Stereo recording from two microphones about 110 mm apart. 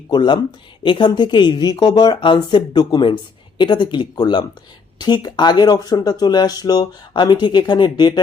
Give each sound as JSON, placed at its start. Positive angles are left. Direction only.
{"t": 0.1, "sound": "speech", "side_deg": 45}